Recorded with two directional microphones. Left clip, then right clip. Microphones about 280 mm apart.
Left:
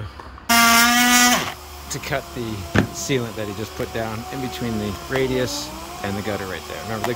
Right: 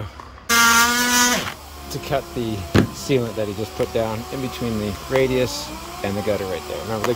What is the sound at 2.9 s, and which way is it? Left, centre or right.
Speech, centre.